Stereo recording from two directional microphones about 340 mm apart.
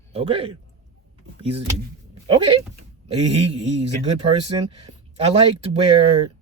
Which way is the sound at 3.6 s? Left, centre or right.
Right.